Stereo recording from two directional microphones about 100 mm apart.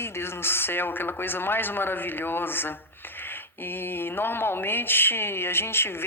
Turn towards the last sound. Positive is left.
turn(degrees=25)  # may be behind; listen again after turning